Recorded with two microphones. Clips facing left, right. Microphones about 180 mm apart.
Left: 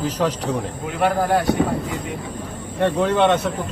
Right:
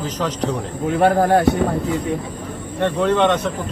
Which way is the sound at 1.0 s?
40° right (ahead or behind).